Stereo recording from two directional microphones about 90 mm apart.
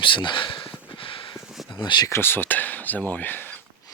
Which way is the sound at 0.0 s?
65° left (ahead or behind).